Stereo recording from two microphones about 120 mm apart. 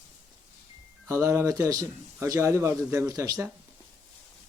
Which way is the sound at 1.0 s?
25° right (ahead or behind).